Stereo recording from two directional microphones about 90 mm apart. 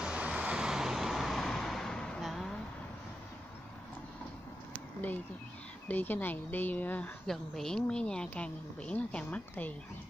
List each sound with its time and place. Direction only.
0.0 s vehicle: 10° right (ahead or behind)
4.7 s a sound: 20° left (ahead or behind)
5.9 s speech: 20° left (ahead or behind)
7.2 s a woman's voice: 5° left (ahead or behind)